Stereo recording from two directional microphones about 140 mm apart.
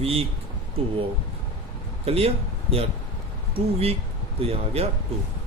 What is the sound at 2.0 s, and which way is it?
Speech, 45° right (ahead or behind).